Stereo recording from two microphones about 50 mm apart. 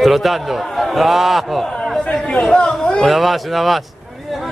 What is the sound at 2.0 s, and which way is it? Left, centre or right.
Speech, left.